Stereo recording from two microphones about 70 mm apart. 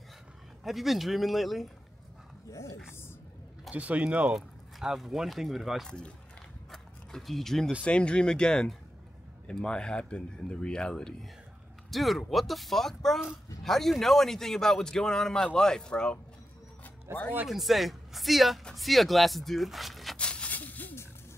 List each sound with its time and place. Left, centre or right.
0.7 s speech: centre
2.5 s speech: left
3.7 s speech: centre
4.4 s speech: centre
6.7 s a sound: centre
7.8 s a man's voice: centre
11.9 s a man's voice: centre
17.1 s speech: right
17.5 s speech: centre
20.2 s a sound: centre